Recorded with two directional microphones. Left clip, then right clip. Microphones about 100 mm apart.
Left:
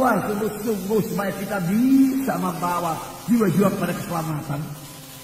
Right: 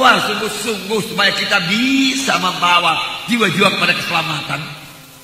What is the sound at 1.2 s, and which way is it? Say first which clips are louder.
A man's voice: right 12 dB; 40° left (ahead or behind).